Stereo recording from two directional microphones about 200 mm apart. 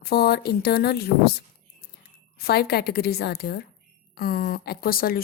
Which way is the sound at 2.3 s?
50° left (ahead or behind).